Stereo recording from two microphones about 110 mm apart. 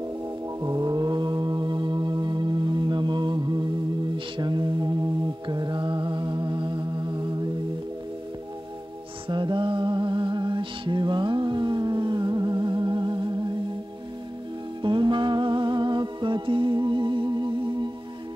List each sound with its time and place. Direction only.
0.6 s music: 35° right (ahead or behind)
5.5 s mantra: 45° right (ahead or behind)
9.3 s music: 45° right (ahead or behind)
14.8 s music: 45° right (ahead or behind)